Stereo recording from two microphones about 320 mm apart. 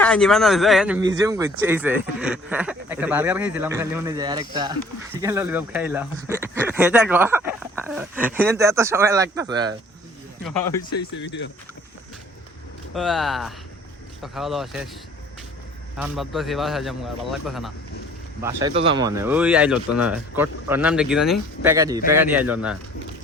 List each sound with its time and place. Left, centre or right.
0.0 s speech: centre
11.2 s speech: left
12.9 s speech: centre
16.0 s speech: centre
18.4 s speech: centre